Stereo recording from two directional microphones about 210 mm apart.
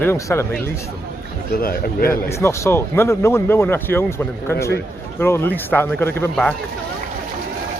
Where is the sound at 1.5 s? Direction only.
45° left (ahead or behind).